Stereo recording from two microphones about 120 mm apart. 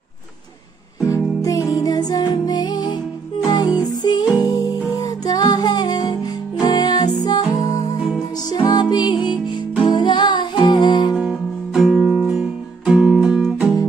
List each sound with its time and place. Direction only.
1.4 s music: 30° left (ahead or behind)
11.1 s music: 5° right (ahead or behind)